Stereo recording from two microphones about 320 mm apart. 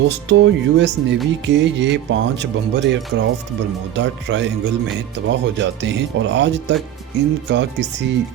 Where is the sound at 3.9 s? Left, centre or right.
Right.